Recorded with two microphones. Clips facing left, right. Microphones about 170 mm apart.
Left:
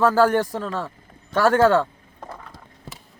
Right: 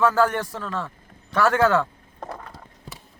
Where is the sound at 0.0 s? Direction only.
35° left (ahead or behind).